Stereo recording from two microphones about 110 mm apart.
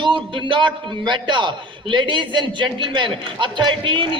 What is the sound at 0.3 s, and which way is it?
A man's voice, 45° right (ahead or behind).